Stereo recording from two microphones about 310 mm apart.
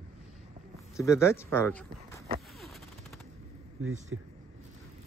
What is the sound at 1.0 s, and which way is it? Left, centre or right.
Speech, centre.